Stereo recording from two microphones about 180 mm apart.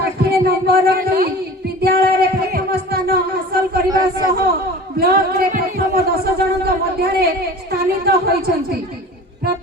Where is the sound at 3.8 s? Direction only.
20° right (ahead or behind).